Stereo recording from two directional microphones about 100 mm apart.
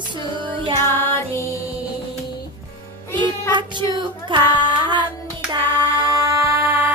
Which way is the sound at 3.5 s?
50° right (ahead or behind).